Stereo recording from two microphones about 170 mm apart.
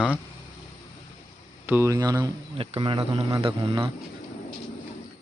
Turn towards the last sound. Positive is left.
turn(degrees=-30)  # may be behind; listen again after turning